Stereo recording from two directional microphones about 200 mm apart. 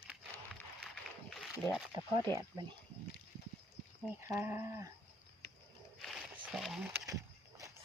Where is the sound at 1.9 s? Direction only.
20° right (ahead or behind).